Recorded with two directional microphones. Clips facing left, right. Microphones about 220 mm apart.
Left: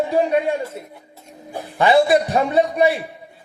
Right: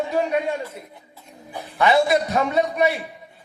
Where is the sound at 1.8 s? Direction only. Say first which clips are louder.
Left 3 dB; 30° left (ahead or behind).